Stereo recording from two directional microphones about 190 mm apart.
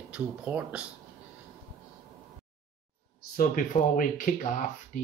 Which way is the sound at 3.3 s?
45° left (ahead or behind).